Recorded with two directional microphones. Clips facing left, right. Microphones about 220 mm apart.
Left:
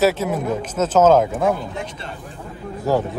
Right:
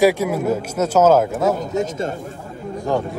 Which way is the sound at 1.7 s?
45° right (ahead or behind).